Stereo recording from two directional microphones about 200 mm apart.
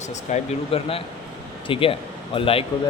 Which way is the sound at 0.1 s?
30° left (ahead or behind).